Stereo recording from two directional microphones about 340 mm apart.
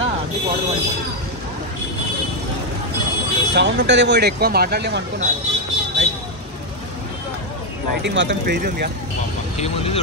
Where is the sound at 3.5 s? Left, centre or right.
Right.